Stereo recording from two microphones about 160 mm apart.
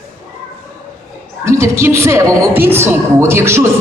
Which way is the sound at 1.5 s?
15° right (ahead or behind).